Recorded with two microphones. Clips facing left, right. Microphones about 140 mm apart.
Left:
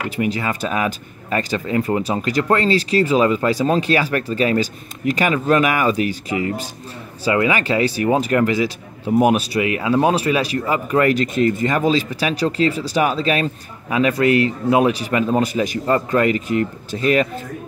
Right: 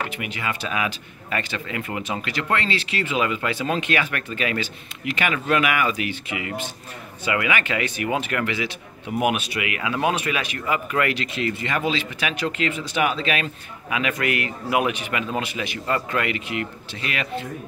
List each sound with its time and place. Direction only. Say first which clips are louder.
0.1 s speech: left 8 dB; 35° left (ahead or behind)